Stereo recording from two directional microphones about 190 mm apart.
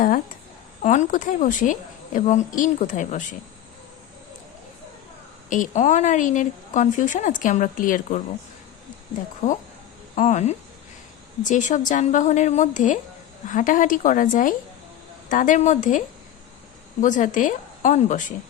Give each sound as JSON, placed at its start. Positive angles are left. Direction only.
{"t": 0.8, "sound": "a woman's voice", "side_deg": 40}
{"t": 5.5, "sound": "a woman's voice", "side_deg": 40}
{"t": 10.2, "sound": "a woman's voice", "side_deg": 40}